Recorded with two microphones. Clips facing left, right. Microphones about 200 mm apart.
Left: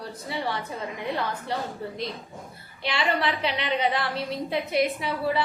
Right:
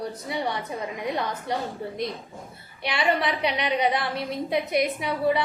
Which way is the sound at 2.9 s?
20° right (ahead or behind).